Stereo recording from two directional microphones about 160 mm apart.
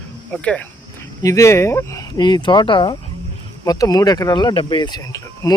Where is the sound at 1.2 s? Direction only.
20° left (ahead or behind).